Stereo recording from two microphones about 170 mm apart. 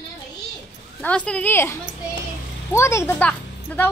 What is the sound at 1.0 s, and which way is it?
A woman's voice, 5° left (ahead or behind).